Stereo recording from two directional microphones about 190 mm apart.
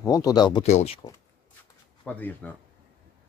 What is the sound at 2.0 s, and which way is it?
Speech, 10° left (ahead or behind).